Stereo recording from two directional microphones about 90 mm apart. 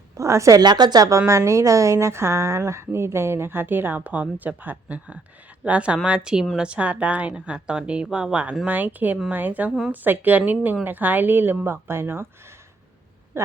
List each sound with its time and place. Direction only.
0.2 s a woman's voice: 35° right (ahead or behind)
0.6 s a woman's voice: 50° right (ahead or behind); by 12.3 s 25° right (ahead or behind)
13.3 s speech: 30° right (ahead or behind)